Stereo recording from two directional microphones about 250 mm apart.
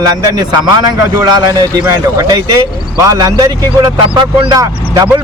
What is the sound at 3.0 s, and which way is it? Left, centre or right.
Speech, centre.